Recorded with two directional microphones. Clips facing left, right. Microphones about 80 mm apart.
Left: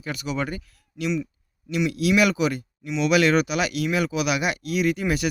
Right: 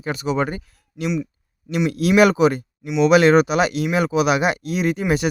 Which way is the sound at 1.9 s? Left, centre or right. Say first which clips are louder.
Right 6 dB; right.